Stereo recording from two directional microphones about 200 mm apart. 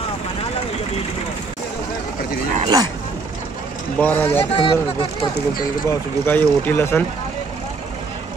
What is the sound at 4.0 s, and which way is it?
Speech, 10° left (ahead or behind).